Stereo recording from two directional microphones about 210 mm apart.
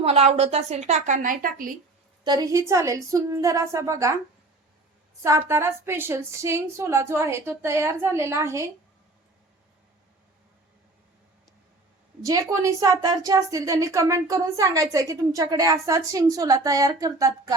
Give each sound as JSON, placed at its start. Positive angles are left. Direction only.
{"t": 0.0, "sound": "a woman's voice", "side_deg": -30}
{"t": 2.2, "sound": "a woman's voice", "side_deg": -20}
{"t": 5.5, "sound": "a woman's voice", "side_deg": -10}
{"t": 12.2, "sound": "a woman's voice", "side_deg": -15}